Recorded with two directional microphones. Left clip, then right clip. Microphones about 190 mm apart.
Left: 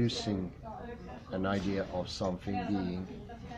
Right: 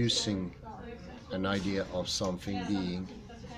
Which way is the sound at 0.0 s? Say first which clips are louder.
Right 4 dB; 5° right (ahead or behind).